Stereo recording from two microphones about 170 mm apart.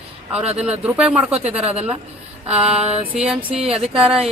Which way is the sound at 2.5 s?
35° right (ahead or behind).